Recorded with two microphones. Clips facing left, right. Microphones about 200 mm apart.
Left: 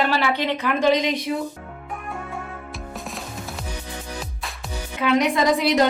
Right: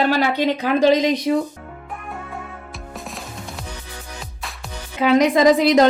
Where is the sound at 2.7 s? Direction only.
Centre (ahead or behind).